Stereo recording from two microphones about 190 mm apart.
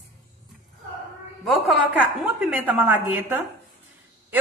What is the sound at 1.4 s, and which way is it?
A woman's voice, 5° right (ahead or behind).